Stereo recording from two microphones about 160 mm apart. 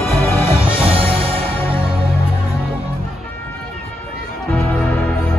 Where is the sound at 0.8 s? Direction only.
35° right (ahead or behind).